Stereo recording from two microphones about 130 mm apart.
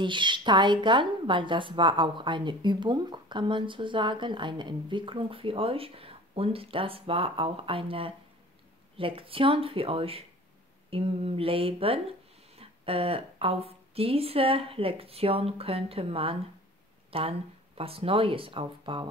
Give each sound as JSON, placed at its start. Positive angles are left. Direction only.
{"t": 0.0, "sound": "a woman's voice", "side_deg": -40}